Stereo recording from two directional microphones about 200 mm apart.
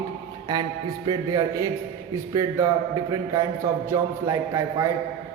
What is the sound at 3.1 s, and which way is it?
A man's voice, 15° right (ahead or behind).